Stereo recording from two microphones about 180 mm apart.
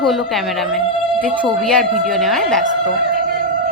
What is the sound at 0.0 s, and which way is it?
Speech, centre (ahead or behind).